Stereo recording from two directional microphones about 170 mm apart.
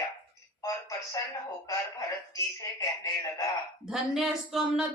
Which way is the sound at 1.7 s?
20° left (ahead or behind).